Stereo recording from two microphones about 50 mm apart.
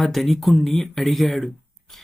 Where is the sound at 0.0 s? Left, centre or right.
Centre.